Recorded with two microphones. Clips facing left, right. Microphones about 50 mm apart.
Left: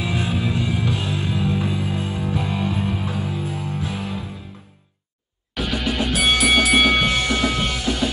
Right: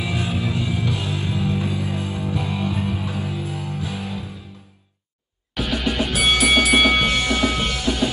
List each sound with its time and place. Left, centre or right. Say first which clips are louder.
0.1 s music: left 2 dB; left
5.5 s music: even; centre